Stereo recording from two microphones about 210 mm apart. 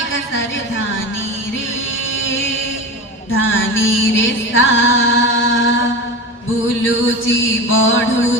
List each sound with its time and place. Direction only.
3.3 s music: 65° left (ahead or behind)
6.8 s music: 65° left (ahead or behind)